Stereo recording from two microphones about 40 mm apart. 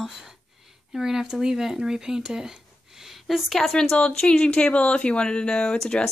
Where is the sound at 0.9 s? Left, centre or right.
Centre.